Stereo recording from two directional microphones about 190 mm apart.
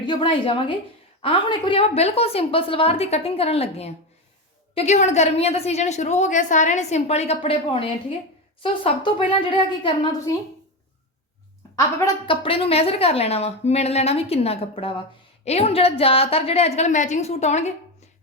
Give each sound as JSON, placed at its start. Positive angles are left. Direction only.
{"t": 0.0, "sound": "a woman's voice", "side_deg": 25}
{"t": 11.8, "sound": "a woman's voice", "side_deg": 15}
{"t": 12.2, "sound": "a woman's voice", "side_deg": 25}